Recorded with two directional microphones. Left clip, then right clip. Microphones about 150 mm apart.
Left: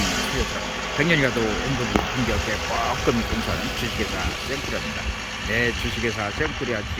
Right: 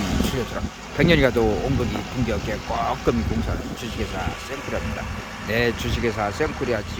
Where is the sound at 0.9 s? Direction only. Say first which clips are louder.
Right 3 dB; 20° right (ahead or behind).